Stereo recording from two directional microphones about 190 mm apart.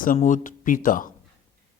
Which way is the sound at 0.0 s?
45° left (ahead or behind).